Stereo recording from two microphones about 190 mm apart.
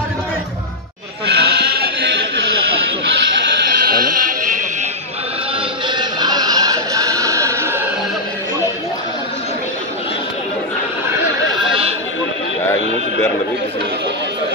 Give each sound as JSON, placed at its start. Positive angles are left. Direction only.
{"t": 1.2, "sound": "goat", "side_deg": -60}
{"t": 3.8, "sound": "sheep", "side_deg": -50}
{"t": 5.9, "sound": "music", "side_deg": -25}